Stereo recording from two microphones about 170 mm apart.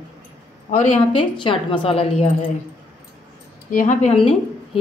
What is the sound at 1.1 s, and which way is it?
Speech, 30° left (ahead or behind).